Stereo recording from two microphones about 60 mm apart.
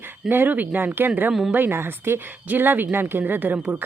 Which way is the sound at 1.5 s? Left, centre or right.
Right.